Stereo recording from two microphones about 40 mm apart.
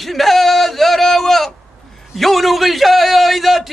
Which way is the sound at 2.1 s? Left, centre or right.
Centre.